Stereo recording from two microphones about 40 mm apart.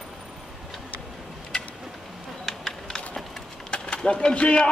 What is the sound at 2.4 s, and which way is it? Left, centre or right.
Typing, centre.